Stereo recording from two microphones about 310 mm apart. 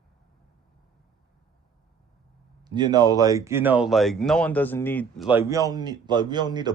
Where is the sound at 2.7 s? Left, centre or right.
Centre.